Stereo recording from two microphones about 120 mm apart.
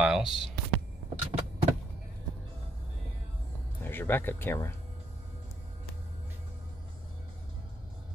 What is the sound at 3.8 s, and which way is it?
Speech, 15° left (ahead or behind).